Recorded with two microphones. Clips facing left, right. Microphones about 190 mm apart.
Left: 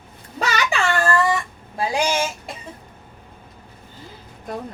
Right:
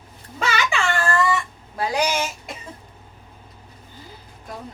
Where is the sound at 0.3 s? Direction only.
40° left (ahead or behind).